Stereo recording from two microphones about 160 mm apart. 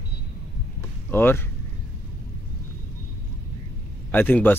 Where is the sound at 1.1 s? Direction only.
15° left (ahead or behind).